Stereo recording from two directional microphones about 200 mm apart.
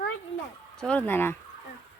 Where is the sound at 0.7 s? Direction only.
5° left (ahead or behind).